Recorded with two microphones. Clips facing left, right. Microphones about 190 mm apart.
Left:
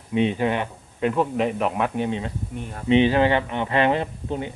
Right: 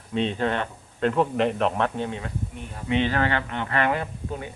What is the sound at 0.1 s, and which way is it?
Speech, 15° left (ahead or behind).